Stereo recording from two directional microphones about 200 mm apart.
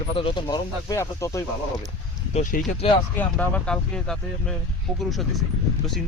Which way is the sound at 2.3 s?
40° left (ahead or behind).